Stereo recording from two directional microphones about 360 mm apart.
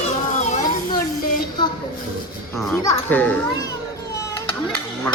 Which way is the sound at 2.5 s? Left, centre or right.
Centre.